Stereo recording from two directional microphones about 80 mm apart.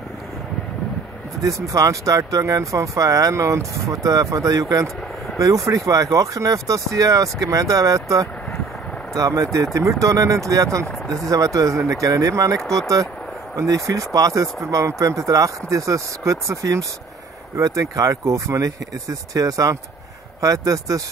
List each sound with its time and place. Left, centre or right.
1.4 s speech: right
12.5 s speech: centre
12.8 s speech: right